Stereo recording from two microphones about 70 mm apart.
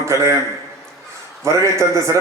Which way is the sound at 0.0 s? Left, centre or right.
Right.